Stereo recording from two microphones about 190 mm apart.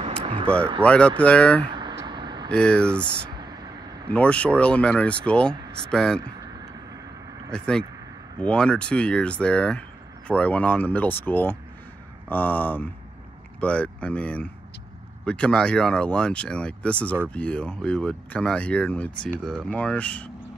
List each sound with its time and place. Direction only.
0.2 s a sound: 30° right (ahead or behind)
0.8 s speech: 5° left (ahead or behind)
1.7 s vehicle: 25° right (ahead or behind)
2.5 s speech: 5° left (ahead or behind)
4.1 s speech: 5° left (ahead or behind)
7.5 s speech: 5° left (ahead or behind)